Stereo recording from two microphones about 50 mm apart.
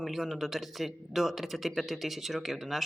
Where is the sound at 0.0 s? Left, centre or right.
Centre.